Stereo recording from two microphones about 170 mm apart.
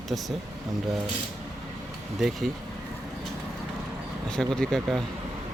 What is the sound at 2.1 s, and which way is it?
Speech, centre (ahead or behind).